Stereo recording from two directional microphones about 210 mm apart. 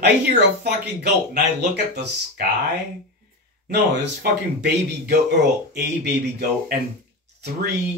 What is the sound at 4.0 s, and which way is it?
Speech, 50° right (ahead or behind).